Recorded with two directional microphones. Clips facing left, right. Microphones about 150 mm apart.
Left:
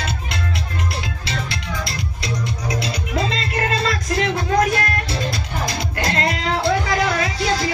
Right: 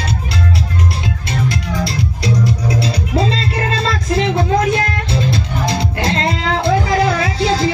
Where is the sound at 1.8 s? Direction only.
35° right (ahead or behind).